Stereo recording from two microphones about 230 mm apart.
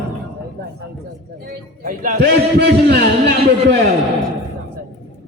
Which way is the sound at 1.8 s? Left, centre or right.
Right.